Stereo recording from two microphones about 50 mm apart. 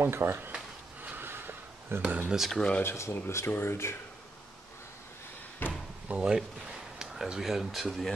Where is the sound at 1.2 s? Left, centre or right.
Right.